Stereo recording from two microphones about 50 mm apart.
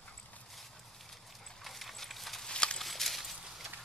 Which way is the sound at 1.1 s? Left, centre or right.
Centre.